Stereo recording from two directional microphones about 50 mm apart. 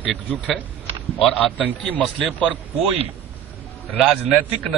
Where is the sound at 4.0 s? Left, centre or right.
Centre.